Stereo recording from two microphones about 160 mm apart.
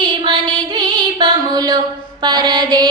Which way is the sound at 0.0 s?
30° right (ahead or behind).